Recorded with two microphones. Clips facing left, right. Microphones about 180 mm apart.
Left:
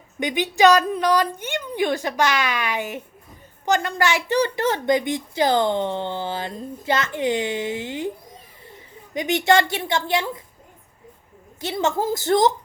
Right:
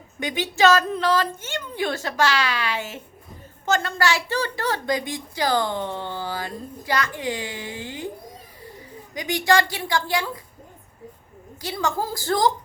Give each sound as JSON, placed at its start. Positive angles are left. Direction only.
{"t": 0.2, "sound": "a woman's voice", "side_deg": 20}
{"t": 9.1, "sound": "a woman's voice", "side_deg": 25}
{"t": 11.6, "sound": "a woman's voice", "side_deg": 25}